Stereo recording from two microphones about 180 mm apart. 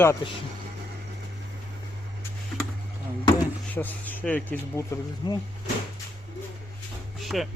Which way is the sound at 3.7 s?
10° left (ahead or behind).